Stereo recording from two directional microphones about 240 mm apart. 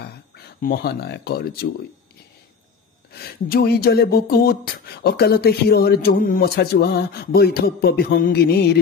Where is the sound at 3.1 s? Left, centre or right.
Left.